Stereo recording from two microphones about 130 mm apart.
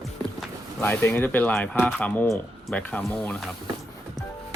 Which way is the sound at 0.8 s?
15° left (ahead or behind).